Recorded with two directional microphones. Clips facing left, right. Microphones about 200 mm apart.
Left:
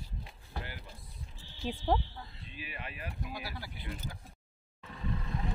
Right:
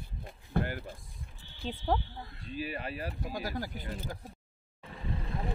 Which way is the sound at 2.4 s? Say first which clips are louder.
Right 10 dB; 40° right (ahead or behind).